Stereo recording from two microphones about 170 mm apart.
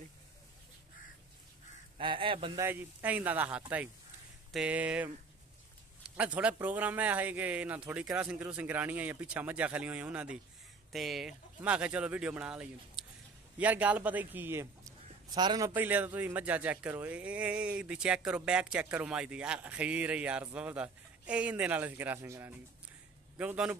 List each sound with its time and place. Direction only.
2.0 s speech: 30° right (ahead or behind)
2.6 s speech: 10° right (ahead or behind)
6.1 s a man's voice: 5° right (ahead or behind); by 15.7 s 25° right (ahead or behind)
15.7 s speech: 10° right (ahead or behind)